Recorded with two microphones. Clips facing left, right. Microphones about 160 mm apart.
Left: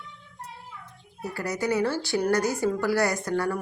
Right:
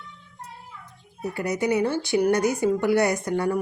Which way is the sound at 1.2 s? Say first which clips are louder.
Right 3 dB; 20° right (ahead or behind).